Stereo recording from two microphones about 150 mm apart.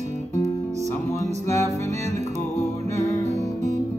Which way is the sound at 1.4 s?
20° left (ahead or behind).